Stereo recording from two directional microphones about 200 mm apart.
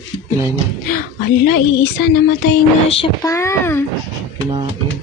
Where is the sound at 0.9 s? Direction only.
45° left (ahead or behind).